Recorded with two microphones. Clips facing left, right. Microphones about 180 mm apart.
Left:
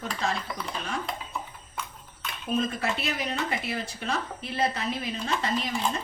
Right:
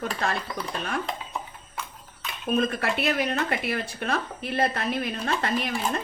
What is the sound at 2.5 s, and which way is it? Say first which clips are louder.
Speech: right 3 dB; 60° right (ahead or behind).